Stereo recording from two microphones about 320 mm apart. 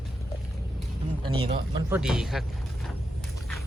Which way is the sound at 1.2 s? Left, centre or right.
Centre.